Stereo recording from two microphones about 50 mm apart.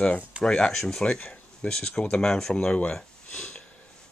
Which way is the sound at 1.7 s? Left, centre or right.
Centre.